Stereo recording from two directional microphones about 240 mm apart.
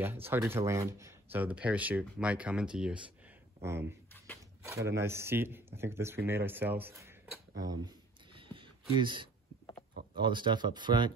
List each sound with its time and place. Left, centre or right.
0.0 s speech: centre
8.4 s a sound: right
10.1 s speech: centre